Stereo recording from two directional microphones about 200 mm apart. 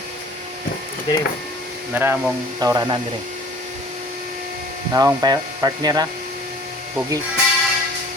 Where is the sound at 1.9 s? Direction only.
10° right (ahead or behind).